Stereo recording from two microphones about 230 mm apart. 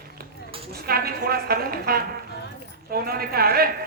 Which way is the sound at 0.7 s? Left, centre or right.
Right.